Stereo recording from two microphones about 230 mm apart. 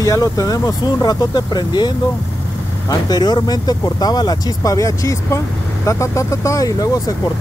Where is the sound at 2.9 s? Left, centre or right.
Centre.